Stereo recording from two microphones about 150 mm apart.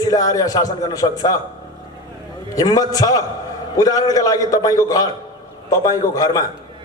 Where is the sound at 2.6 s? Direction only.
25° left (ahead or behind).